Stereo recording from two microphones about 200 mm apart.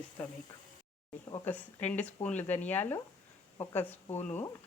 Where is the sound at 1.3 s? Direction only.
10° left (ahead or behind).